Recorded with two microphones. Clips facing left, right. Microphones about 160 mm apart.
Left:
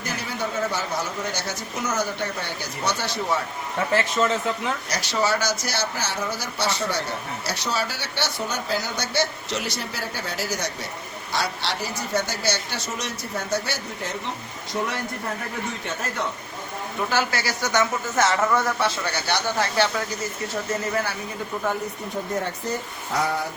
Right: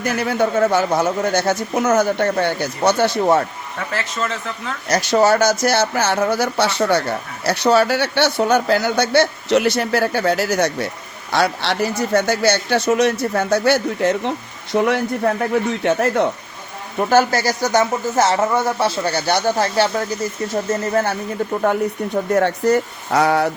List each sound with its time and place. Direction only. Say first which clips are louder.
0.0 s speech: right 11 dB; 65° right (ahead or behind)
4.9 s speech: right 11 dB; 55° right (ahead or behind); by 16.2 s 70° right (ahead or behind)
17.0 s speech: right 10 dB; 45° right (ahead or behind)
20.5 s speech: right 7 dB; 45° right (ahead or behind)
21.6 s speech: right 8 dB; 65° right (ahead or behind)